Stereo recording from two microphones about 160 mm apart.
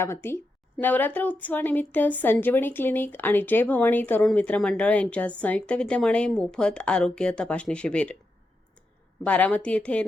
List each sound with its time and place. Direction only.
0.0 s a woman's voice: 15° left (ahead or behind)
9.2 s a woman's voice: 10° left (ahead or behind)